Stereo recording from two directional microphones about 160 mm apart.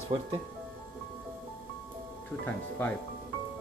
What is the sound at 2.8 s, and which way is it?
Speech, 15° left (ahead or behind).